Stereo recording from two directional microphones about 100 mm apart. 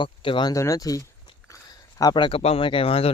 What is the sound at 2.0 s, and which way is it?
Speech, 50° left (ahead or behind).